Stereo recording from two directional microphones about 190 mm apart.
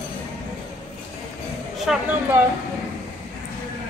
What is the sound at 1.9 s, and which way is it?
Speech, centre (ahead or behind).